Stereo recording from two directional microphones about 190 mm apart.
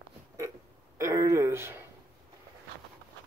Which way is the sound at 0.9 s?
15° right (ahead or behind).